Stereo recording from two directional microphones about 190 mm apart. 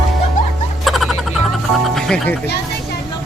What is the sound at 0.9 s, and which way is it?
Frog, centre (ahead or behind).